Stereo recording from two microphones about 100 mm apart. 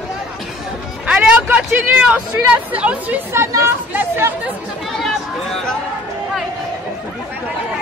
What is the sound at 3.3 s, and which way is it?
Speech, 25° right (ahead or behind).